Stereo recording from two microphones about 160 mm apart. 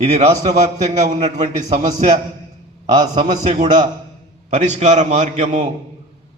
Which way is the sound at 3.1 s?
35° right (ahead or behind).